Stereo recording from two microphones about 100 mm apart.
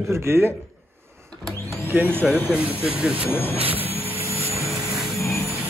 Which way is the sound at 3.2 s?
20° left (ahead or behind).